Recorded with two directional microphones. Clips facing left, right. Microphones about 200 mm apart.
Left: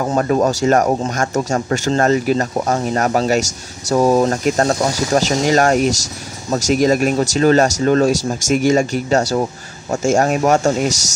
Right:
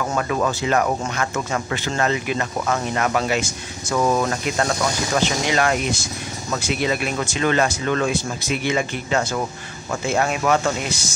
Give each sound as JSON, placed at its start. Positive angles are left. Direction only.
{"t": 0.0, "sound": "speech", "side_deg": 35}